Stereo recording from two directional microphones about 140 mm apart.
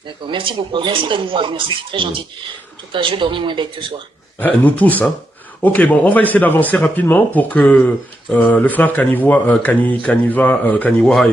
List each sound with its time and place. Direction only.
0.3 s speech: 35° right (ahead or behind)
4.4 s speech: 10° left (ahead or behind)